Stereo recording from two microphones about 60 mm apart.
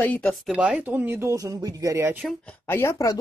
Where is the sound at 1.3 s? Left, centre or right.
Right.